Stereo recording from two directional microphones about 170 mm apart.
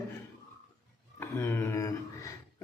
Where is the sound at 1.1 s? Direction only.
15° left (ahead or behind).